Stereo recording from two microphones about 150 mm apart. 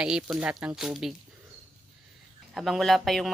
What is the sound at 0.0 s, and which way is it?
Speech, 5° right (ahead or behind).